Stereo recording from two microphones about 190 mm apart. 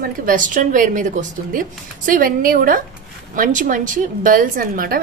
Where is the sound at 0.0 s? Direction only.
45° right (ahead or behind).